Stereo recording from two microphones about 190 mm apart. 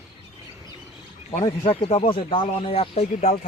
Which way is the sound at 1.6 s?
30° left (ahead or behind).